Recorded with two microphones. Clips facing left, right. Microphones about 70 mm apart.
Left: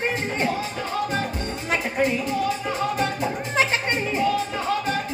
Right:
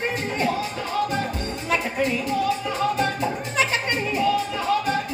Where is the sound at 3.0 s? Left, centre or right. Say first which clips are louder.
Right 1 dB; left.